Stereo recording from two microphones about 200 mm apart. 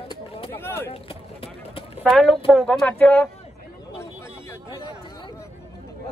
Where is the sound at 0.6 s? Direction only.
10° left (ahead or behind).